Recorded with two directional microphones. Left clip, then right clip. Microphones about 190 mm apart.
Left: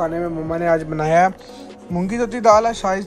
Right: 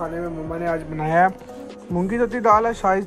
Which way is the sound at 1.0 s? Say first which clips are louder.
Even; 20° left (ahead or behind).